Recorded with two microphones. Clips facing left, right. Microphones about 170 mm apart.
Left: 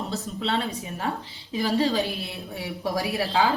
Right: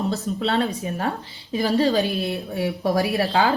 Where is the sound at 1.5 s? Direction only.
40° right (ahead or behind).